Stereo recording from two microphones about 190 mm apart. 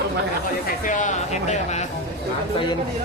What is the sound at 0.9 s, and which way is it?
Speech, 40° left (ahead or behind).